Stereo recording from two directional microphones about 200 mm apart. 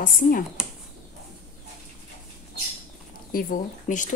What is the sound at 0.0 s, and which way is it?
Speech, 45° left (ahead or behind).